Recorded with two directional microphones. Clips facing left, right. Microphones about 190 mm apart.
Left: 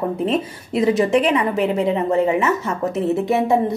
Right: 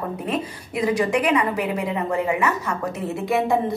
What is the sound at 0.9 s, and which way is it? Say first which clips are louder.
A woman's voice: left 3 dB; 25° left (ahead or behind).